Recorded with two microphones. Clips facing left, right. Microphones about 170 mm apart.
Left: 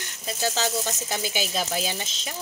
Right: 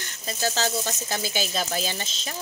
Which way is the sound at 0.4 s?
15° left (ahead or behind).